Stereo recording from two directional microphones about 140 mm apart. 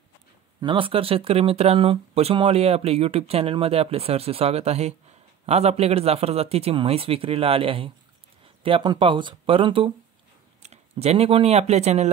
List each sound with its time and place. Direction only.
0.6 s speech: 35° right (ahead or behind)
10.6 s speech: 50° right (ahead or behind)